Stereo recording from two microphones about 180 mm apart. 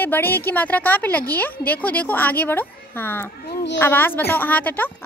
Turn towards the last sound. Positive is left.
turn(degrees=10)  # may be behind; listen again after turning